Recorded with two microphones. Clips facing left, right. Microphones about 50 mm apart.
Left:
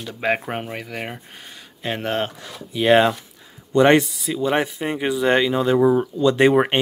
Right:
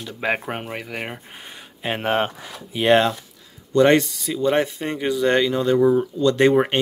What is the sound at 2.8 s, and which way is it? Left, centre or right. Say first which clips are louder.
Speech: left 1 dB; centre.